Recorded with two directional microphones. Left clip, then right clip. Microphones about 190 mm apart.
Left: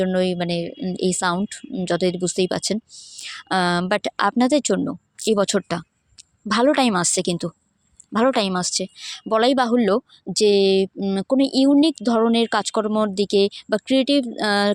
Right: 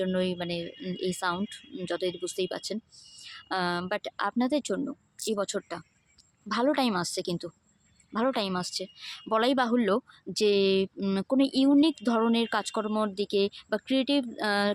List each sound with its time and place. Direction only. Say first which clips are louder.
0.0 s speech: left 8 dB; 35° left (ahead or behind)